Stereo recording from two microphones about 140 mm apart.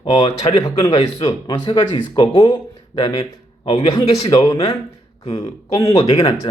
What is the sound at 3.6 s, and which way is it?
Speech, 40° left (ahead or behind).